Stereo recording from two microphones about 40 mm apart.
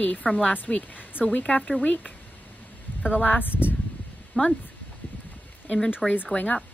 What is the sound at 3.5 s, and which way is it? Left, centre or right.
Speech, left.